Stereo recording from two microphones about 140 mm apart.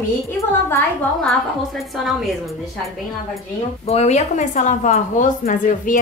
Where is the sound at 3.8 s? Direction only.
50° left (ahead or behind).